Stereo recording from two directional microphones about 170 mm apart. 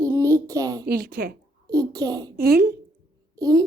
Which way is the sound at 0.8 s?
60° right (ahead or behind).